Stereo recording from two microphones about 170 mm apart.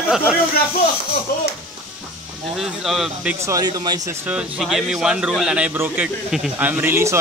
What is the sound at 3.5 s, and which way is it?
Speech, 20° right (ahead or behind).